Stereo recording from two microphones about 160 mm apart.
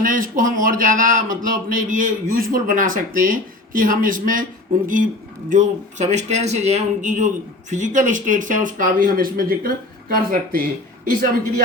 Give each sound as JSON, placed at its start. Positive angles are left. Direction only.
{"t": 0.0, "sound": "speech", "side_deg": -60}
{"t": 5.5, "sound": "a man's voice", "side_deg": -50}